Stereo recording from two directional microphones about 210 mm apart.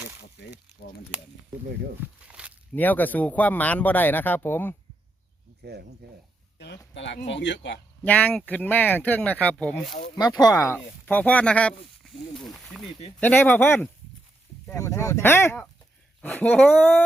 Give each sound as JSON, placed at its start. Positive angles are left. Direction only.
{"t": 0.2, "sound": "a sound", "side_deg": 55}
{"t": 2.2, "sound": "walk", "side_deg": -5}
{"t": 2.7, "sound": "speech", "side_deg": 10}
{"t": 5.6, "sound": "speech", "side_deg": -50}
{"t": 6.9, "sound": "speech", "side_deg": 60}
{"t": 8.0, "sound": "speech", "side_deg": 5}
{"t": 10.2, "sound": "speech", "side_deg": 20}